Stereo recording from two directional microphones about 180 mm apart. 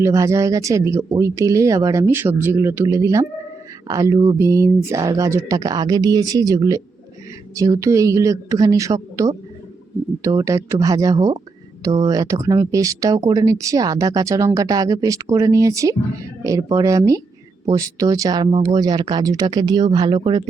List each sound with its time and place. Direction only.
0.0 s speech: 15° right (ahead or behind)